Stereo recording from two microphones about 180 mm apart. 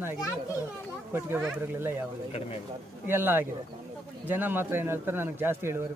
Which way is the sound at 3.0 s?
10° right (ahead or behind).